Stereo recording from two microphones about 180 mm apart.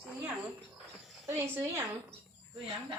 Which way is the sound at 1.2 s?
10° right (ahead or behind).